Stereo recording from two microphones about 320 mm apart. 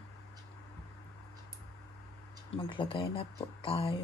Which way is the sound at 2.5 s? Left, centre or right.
Centre.